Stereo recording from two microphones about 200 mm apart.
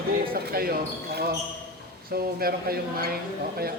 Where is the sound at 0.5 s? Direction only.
50° right (ahead or behind).